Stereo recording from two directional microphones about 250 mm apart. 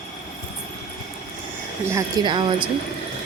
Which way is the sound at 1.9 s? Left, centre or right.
Centre.